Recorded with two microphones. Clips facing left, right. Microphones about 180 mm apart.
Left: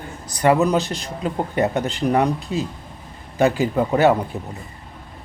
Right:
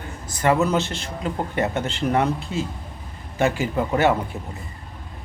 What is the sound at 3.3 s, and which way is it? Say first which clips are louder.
Speech: left 4 dB; 20° left (ahead or behind).